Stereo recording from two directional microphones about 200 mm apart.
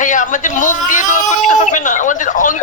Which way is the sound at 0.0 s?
40° left (ahead or behind).